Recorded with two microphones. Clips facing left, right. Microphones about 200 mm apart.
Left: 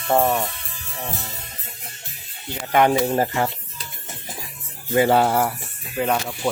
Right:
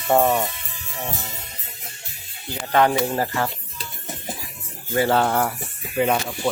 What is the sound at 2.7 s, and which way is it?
Speech, 20° left (ahead or behind).